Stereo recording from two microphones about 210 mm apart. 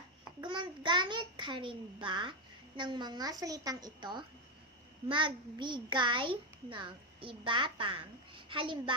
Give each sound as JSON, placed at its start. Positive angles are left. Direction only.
{"t": 0.4, "sound": "a child's voice", "side_deg": -20}